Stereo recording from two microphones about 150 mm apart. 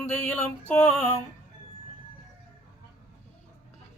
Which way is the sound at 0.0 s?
10° left (ahead or behind).